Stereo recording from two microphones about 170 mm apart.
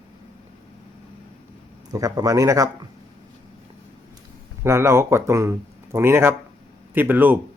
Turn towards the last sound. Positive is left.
turn(degrees=-10)  # may be behind; listen again after turning